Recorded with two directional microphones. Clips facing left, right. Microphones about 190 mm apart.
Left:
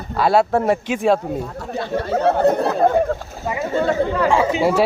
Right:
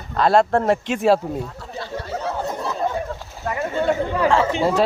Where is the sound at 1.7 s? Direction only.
60° left (ahead or behind).